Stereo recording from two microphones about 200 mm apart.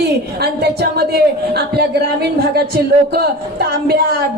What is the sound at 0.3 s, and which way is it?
Speech, 55° right (ahead or behind).